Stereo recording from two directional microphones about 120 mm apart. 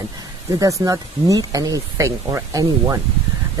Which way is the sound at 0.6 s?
30° right (ahead or behind).